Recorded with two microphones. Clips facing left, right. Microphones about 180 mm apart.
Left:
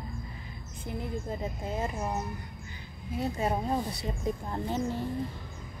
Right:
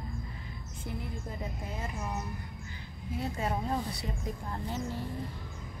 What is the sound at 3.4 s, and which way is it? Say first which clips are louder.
Speech: left 3 dB; 25° left (ahead or behind).